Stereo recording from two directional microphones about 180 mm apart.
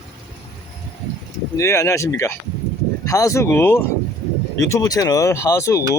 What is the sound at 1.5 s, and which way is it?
Speech, 15° left (ahead or behind).